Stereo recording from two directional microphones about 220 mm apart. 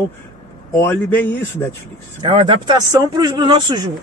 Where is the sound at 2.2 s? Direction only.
25° right (ahead or behind).